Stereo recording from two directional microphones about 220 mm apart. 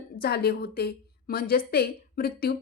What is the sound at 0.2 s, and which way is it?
A woman's voice, 45° left (ahead or behind).